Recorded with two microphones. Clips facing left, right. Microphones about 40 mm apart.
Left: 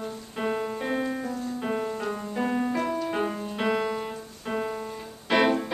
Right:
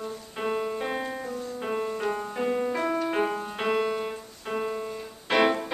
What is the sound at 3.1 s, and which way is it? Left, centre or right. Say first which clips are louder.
Music: right 2 dB; centre.